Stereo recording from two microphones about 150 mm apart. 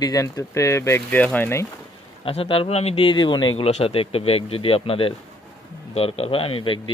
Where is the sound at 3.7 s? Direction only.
45° left (ahead or behind).